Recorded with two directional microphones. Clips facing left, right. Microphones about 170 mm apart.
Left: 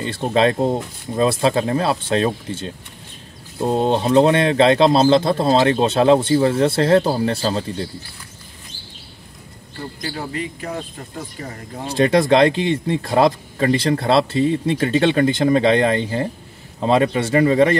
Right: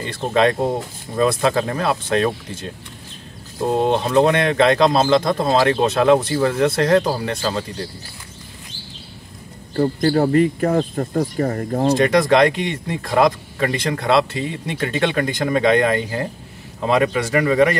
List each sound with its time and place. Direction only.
0.0 s speech: 30° left (ahead or behind)
3.8 s speech: 30° left (ahead or behind)
9.8 s speech: 50° right (ahead or behind)
12.0 s speech: 30° left (ahead or behind)